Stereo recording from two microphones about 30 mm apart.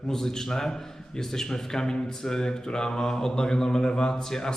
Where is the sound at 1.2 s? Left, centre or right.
Centre.